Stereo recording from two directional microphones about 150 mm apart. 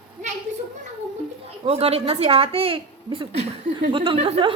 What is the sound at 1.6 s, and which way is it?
A woman's voice, 40° right (ahead or behind).